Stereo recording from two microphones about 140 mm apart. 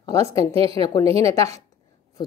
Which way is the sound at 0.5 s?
45° right (ahead or behind).